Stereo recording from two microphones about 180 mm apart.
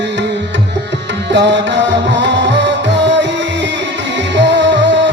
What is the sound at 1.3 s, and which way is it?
Music, 80° right.